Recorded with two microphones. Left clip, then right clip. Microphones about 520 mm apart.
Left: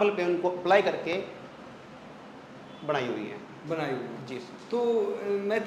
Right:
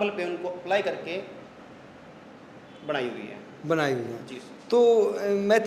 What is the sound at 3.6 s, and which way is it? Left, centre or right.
Speech, right.